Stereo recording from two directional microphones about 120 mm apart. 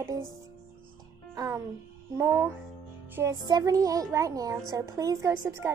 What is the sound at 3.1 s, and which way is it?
Speech, 25° right (ahead or behind).